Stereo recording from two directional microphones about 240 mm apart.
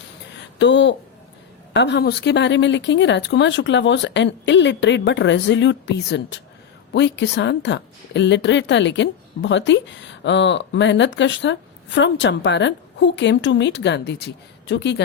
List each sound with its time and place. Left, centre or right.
0.6 s a woman's voice: left